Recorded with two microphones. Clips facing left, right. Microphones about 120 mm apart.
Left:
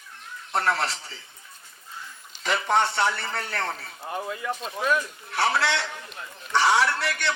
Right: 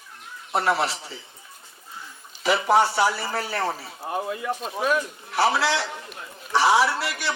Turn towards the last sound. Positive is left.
turn(degrees=-5)  # may be behind; listen again after turning